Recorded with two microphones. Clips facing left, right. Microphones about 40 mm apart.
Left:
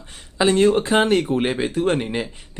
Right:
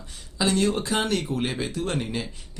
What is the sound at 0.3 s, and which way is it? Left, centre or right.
Speech, left.